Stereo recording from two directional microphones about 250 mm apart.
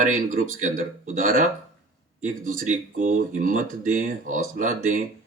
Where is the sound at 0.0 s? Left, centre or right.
Right.